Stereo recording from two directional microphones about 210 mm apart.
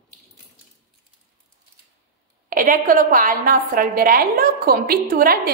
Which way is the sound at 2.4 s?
40° right (ahead or behind).